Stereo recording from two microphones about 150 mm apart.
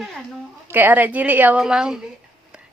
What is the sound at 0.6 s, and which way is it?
A woman's voice, 10° right (ahead or behind).